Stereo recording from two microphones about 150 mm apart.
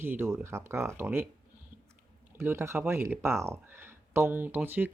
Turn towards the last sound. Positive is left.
turn(degrees=-10)  # may be behind; listen again after turning